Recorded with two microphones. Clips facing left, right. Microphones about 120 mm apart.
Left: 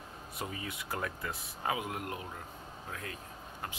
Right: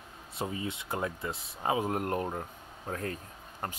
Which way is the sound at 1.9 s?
45° right (ahead or behind).